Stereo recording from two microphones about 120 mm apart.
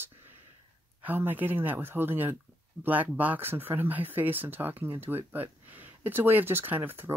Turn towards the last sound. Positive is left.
turn(degrees=-15)  # may be behind; listen again after turning